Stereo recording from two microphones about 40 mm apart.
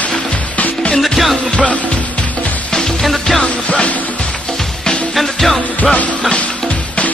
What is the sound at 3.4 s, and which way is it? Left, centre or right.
Music, left.